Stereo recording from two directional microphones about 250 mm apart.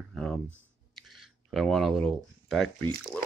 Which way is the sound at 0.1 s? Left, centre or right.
Centre.